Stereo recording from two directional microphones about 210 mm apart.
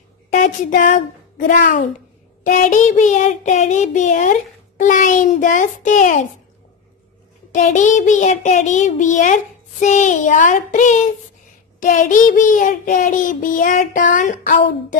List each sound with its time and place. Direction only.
0.3 s speech: 40° left (ahead or behind)
1.5 s child singing: 40° left (ahead or behind)
7.5 s child singing: 35° left (ahead or behind)